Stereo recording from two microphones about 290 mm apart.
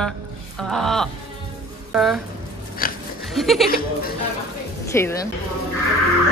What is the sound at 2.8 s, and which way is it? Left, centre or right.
Pig, left.